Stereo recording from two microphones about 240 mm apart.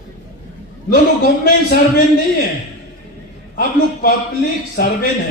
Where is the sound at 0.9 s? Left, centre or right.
Left.